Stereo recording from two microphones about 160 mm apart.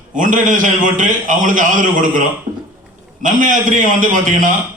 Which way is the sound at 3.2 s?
55° right (ahead or behind).